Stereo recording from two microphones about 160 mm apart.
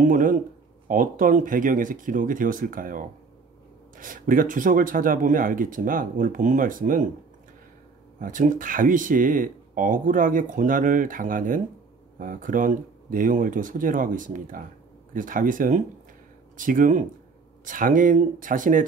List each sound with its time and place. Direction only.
0.0 s a sound: 55° right (ahead or behind)
0.8 s speech: 55° right (ahead or behind)
8.2 s speech: 55° right (ahead or behind)